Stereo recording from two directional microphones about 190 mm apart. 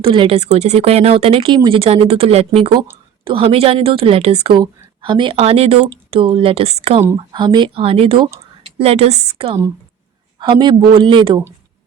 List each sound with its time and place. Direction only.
0.0 s a woman's voice: 30° right (ahead or behind)